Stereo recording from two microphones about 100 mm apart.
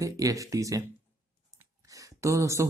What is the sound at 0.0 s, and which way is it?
Speech, 35° right (ahead or behind).